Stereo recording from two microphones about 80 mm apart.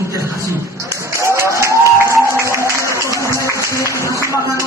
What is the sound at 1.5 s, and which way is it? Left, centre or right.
Music, right.